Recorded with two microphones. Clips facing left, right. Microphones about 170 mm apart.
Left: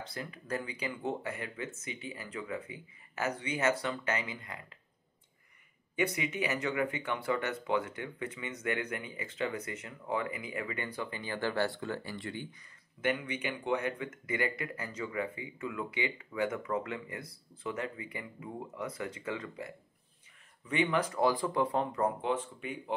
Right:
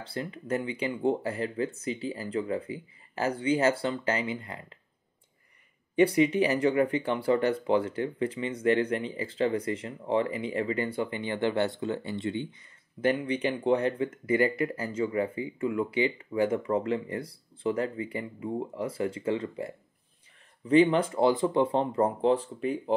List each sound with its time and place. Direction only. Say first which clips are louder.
0.0 s speech: right 7 dB; 30° right (ahead or behind)
5.9 s speech: right 11 dB; 30° right (ahead or behind)